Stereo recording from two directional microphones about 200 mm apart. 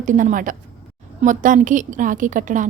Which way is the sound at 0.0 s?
40° right (ahead or behind).